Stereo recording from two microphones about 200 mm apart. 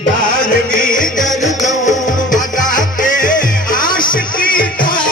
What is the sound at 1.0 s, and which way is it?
Music, 40° left (ahead or behind).